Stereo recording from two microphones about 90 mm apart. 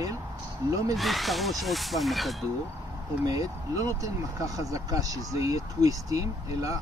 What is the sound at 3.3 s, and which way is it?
Speech, 40° right (ahead or behind).